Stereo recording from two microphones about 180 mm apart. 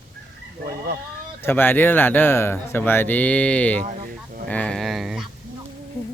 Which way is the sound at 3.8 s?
45° right (ahead or behind).